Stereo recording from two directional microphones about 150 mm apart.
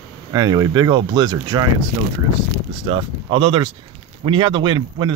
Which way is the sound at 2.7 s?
35° right (ahead or behind).